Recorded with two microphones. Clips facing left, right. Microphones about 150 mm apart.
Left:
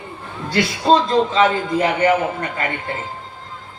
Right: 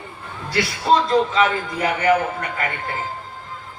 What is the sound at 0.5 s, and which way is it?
A man's voice, 20° left (ahead or behind).